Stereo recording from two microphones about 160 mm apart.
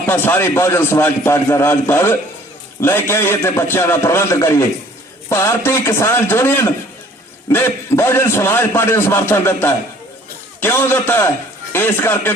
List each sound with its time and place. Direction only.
0.0 s a man's voice: 15° left (ahead or behind)